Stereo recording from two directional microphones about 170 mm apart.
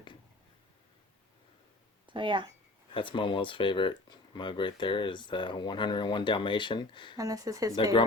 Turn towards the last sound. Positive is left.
turn(degrees=-20)  # may be behind; listen again after turning